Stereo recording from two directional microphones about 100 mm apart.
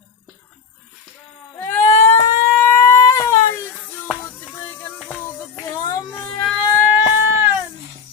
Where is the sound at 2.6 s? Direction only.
30° left (ahead or behind).